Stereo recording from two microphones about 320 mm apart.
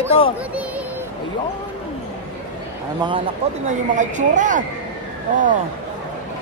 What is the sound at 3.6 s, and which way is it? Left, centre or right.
A woman's voice, right.